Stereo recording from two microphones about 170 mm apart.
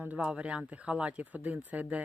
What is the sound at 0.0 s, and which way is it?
Speech, 5° right (ahead or behind).